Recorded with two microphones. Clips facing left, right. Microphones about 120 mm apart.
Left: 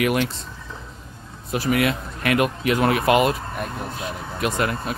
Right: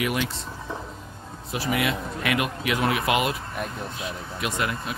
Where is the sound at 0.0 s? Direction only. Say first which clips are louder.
Left 5 dB; 55° left (ahead or behind).